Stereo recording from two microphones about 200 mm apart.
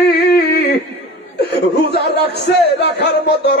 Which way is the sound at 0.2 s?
55° left (ahead or behind).